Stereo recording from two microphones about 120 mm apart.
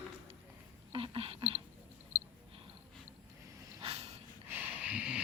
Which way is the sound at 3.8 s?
55° right (ahead or behind).